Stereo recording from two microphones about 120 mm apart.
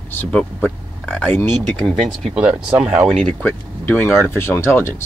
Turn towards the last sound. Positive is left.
turn(degrees=20)  # may be behind; listen again after turning